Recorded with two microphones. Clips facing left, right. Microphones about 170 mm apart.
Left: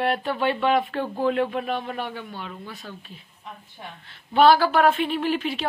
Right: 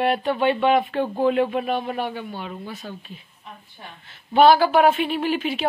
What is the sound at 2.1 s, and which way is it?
Speech, 30° right (ahead or behind).